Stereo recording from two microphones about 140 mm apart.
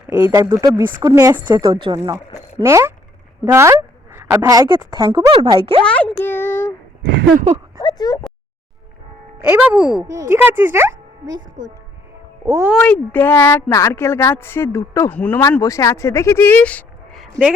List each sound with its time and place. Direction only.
0.1 s speech: 20° right (ahead or behind)
2.6 s a woman's voice: 20° right (ahead or behind); by 5.8 s 40° right (ahead or behind)
5.8 s speech: 10° left (ahead or behind)
7.8 s a sound: 30° left (ahead or behind)
9.4 s speech: 10° right (ahead or behind)
10.0 s speech: 20° right (ahead or behind)
12.5 s speech: 20° right (ahead or behind)
12.8 s speech: 10° left (ahead or behind)
15.6 s speech: 25° left (ahead or behind); by 17.4 s 5° left (ahead or behind)